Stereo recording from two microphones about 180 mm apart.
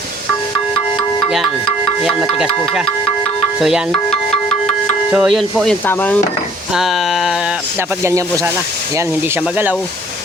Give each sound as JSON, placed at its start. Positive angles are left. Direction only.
{"t": 3.6, "sound": "music", "side_deg": 0}
{"t": 5.1, "sound": "speech", "side_deg": 0}
{"t": 6.7, "sound": "speech", "side_deg": 0}
{"t": 8.0, "sound": "speech", "side_deg": -15}